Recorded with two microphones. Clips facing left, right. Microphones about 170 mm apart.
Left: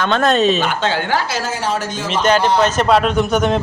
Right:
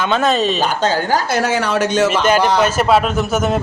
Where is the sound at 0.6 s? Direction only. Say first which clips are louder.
Right 2 dB; 40° right (ahead or behind).